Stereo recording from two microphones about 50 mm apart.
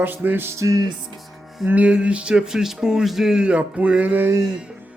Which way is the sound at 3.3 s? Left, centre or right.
Right.